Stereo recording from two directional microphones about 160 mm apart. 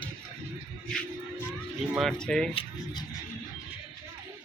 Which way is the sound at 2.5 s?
35° left (ahead or behind).